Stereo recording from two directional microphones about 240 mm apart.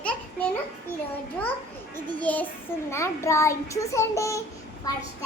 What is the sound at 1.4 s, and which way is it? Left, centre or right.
A child's voice, centre.